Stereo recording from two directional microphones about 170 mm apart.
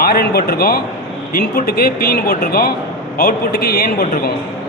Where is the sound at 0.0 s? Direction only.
65° left (ahead or behind).